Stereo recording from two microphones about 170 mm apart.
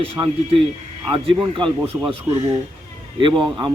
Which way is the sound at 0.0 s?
30° right (ahead or behind).